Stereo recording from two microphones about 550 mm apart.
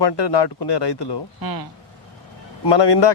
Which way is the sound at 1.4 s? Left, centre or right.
Right.